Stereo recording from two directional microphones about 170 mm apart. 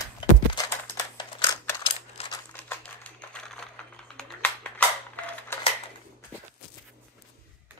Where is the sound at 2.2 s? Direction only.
40° left (ahead or behind).